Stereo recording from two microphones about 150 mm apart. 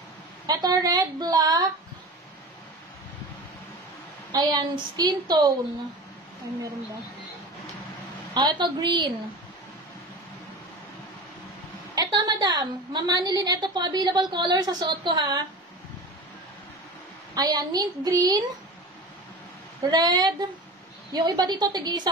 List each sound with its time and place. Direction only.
0.5 s a woman's voice: 25° right (ahead or behind)
4.3 s a woman's voice: 25° right (ahead or behind)
8.4 s a woman's voice: 30° right (ahead or behind)
11.9 s a woman's voice: 25° right (ahead or behind)
17.3 s a woman's voice: 25° right (ahead or behind)
19.8 s a woman's voice: 25° right (ahead or behind)